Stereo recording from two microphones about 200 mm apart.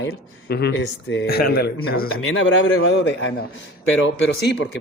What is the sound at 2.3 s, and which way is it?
Speech, 75° left (ahead or behind).